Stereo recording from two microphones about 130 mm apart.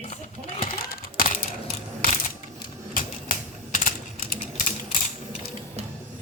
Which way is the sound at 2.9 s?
90° left.